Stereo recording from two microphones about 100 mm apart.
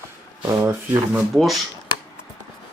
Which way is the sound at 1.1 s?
Centre (ahead or behind).